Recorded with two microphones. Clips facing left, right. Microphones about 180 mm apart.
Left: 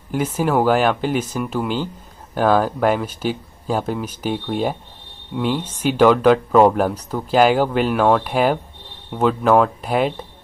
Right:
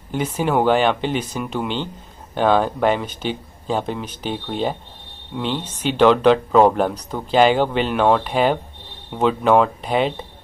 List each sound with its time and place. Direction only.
0.1 s speech: 5° left (ahead or behind)